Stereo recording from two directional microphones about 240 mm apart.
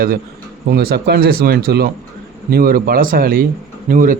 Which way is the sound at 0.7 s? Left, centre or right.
Right.